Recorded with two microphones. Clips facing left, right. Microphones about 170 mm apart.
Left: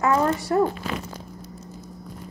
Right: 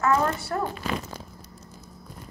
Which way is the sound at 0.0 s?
15° left (ahead or behind).